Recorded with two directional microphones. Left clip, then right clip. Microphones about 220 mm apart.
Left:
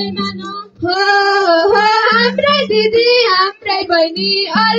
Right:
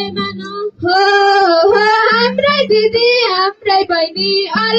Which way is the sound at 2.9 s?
50° right (ahead or behind).